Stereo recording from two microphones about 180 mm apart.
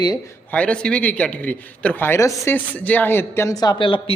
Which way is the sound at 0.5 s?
5° left (ahead or behind).